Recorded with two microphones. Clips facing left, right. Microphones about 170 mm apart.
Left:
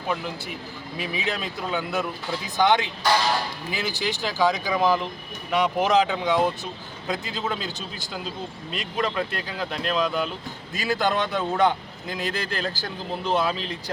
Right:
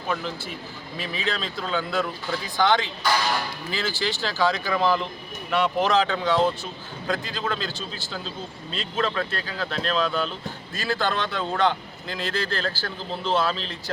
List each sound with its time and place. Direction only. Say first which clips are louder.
0.1 s a man's voice: even; 10° left (ahead or behind)